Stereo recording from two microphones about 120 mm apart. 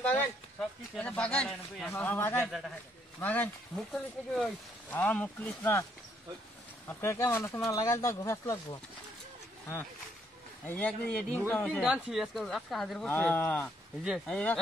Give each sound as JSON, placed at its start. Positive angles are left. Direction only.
{"t": 0.6, "sound": "speech", "side_deg": 10}
{"t": 3.7, "sound": "speech", "side_deg": 5}
{"t": 6.9, "sound": "speech", "side_deg": 20}
{"t": 10.6, "sound": "speech", "side_deg": 15}
{"t": 11.8, "sound": "speech", "side_deg": -5}
{"t": 13.1, "sound": "speech", "side_deg": 15}
{"t": 14.0, "sound": "speech", "side_deg": -5}
{"t": 14.3, "sound": "speech", "side_deg": 10}